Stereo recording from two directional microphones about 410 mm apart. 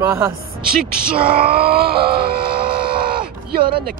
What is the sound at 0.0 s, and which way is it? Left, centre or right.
Speech, centre.